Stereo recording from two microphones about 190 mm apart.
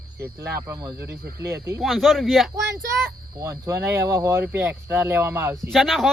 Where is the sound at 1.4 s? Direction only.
15° right (ahead or behind).